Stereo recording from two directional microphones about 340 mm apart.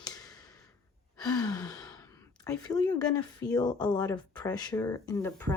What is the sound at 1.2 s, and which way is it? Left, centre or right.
Speech, centre.